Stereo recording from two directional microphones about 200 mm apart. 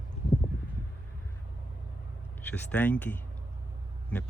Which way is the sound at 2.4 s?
10° left (ahead or behind).